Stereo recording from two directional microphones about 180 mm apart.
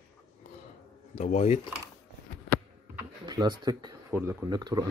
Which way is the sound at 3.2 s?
25° right (ahead or behind).